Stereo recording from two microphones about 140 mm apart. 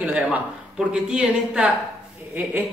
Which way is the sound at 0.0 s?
10° right (ahead or behind).